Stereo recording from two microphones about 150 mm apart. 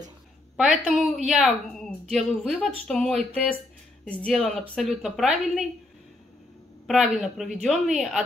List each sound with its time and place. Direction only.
0.6 s a woman's voice: 5° right (ahead or behind)
6.9 s a woman's voice: centre (ahead or behind)